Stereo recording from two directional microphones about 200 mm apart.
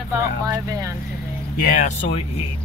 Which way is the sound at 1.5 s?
45° left (ahead or behind).